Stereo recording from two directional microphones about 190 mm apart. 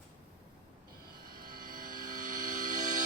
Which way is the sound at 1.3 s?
50° right (ahead or behind).